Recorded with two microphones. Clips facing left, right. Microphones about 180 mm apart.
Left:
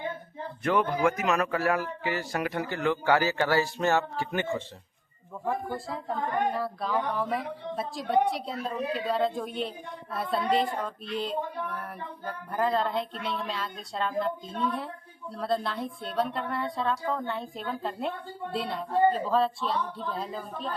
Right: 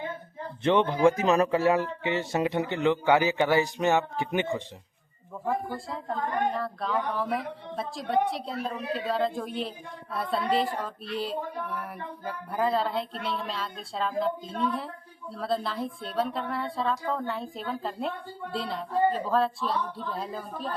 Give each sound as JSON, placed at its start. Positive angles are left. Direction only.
{"t": 0.6, "sound": "speech", "side_deg": -25}
{"t": 5.5, "sound": "a woman's voice", "side_deg": 0}